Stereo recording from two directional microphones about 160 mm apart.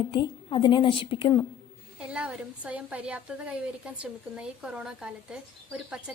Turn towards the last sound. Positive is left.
turn(degrees=-5)  # may be behind; listen again after turning